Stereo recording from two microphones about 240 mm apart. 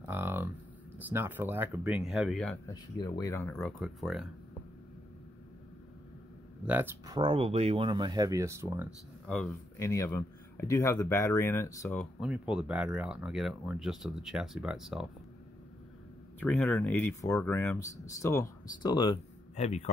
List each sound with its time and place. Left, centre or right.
0.0 s a sound: centre
1.1 s speech: centre
2.7 s speech: centre
6.6 s speech: centre
9.3 s speech: centre
16.3 s speech: centre; by 19.9 s left